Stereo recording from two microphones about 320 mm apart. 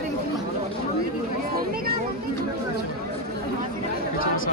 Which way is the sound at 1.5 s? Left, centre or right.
Right.